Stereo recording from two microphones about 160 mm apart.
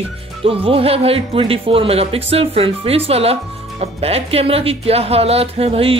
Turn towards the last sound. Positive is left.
turn(degrees=-35)  # may be behind; listen again after turning